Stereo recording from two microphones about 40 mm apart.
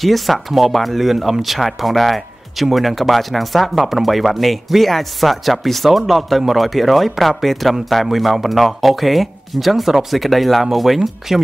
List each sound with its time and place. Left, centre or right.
0.0 s speech: centre